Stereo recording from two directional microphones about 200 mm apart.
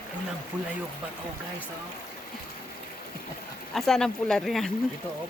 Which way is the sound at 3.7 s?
Centre (ahead or behind).